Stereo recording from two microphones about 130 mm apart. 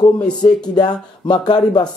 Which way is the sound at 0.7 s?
35° left (ahead or behind).